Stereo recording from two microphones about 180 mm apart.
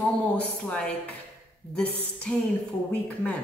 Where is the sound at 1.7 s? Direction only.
5° left (ahead or behind).